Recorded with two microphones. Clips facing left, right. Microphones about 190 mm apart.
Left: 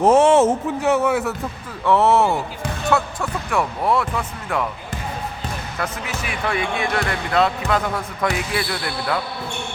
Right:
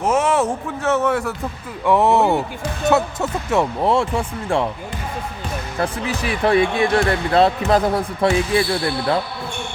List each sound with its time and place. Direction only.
0.0 s speech: 30° left (ahead or behind); by 1.4 s 5° left (ahead or behind)
1.8 s speech: 15° right (ahead or behind)
5.7 s speech: 30° right (ahead or behind)